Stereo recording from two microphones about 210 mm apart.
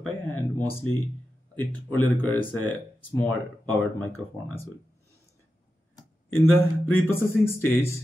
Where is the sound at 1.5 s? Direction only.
10° left (ahead or behind).